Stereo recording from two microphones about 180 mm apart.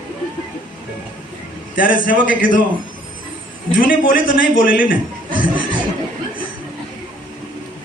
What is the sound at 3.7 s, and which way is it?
A man's voice, 50° left (ahead or behind).